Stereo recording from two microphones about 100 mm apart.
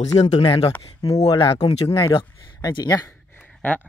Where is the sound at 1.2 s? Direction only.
65° left (ahead or behind).